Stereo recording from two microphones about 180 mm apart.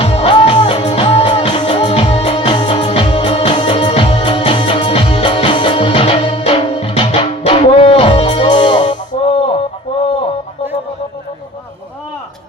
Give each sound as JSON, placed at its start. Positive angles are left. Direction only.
{"t": 0.0, "sound": "music", "side_deg": 35}